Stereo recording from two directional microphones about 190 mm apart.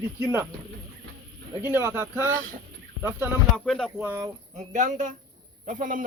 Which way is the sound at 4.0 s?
10° right (ahead or behind).